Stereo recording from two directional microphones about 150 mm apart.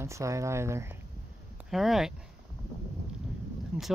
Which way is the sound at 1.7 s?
Centre (ahead or behind).